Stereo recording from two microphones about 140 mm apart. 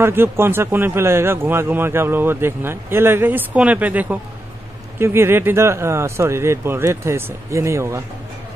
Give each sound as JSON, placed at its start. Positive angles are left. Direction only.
{"t": 0.0, "sound": "a man's voice", "side_deg": -15}